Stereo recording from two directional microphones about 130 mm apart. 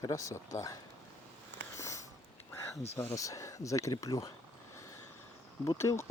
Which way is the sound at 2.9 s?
20° left (ahead or behind).